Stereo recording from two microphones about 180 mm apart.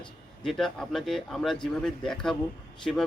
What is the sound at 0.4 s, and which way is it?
A man's voice, centre (ahead or behind).